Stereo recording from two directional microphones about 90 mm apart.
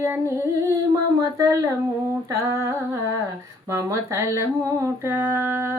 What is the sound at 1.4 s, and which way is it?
Speech, 40° right (ahead or behind).